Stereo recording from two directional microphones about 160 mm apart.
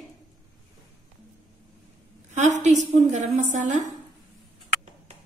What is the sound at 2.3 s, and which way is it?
Speech, 50° right (ahead or behind).